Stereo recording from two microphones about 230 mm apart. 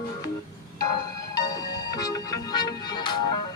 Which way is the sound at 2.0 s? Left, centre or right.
Centre.